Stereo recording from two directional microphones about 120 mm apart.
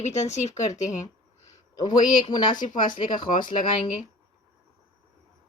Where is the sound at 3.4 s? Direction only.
40° left (ahead or behind).